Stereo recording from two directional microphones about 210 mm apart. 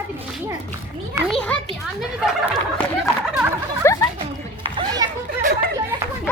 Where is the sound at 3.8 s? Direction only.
15° left (ahead or behind).